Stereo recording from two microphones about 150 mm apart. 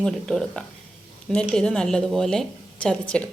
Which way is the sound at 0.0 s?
5° left (ahead or behind).